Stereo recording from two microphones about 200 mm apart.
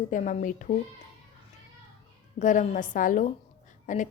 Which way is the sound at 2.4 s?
40° left (ahead or behind).